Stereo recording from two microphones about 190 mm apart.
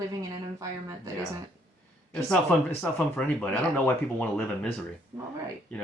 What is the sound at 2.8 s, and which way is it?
Speech, 5° left (ahead or behind).